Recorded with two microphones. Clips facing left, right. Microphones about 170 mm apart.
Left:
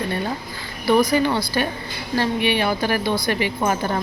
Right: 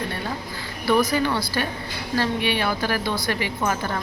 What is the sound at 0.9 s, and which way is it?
A woman's voice, 15° left (ahead or behind).